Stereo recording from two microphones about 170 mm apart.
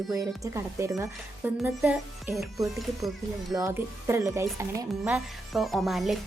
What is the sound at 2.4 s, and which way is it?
Speech, centre (ahead or behind).